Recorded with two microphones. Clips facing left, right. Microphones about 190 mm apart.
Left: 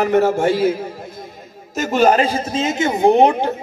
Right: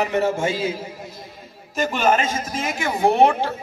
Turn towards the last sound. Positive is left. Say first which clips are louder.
# left 4 dB
turn(degrees=20)  # may be behind; listen again after turning